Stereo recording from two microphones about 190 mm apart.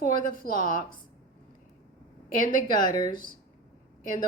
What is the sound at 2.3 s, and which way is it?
Speech, 45° left (ahead or behind).